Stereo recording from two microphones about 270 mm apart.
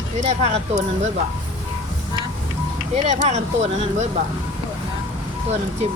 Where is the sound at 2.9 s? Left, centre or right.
Right.